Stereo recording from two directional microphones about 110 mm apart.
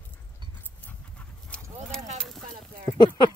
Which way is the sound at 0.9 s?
10° left (ahead or behind).